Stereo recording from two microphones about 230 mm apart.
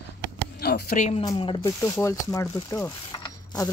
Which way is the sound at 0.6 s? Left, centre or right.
Left.